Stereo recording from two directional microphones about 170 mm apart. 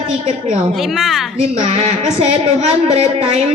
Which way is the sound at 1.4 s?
40° right (ahead or behind).